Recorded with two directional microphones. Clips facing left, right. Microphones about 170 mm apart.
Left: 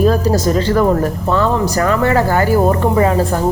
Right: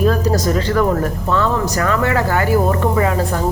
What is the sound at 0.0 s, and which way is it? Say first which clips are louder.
A woman's voice: left 3 dB; 30° left (ahead or behind).